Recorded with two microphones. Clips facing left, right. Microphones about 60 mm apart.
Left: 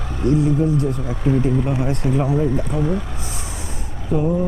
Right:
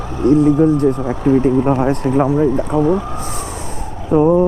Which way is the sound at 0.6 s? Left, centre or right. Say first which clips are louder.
Right 7 dB; right.